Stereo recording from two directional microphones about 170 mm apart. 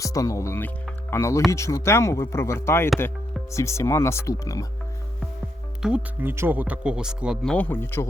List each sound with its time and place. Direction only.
0.0 s speech: 20° left (ahead or behind)
5.8 s speech: 10° right (ahead or behind)
7.5 s speech: 10° left (ahead or behind)